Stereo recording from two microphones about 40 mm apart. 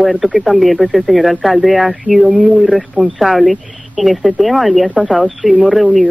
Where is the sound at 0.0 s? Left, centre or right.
Centre.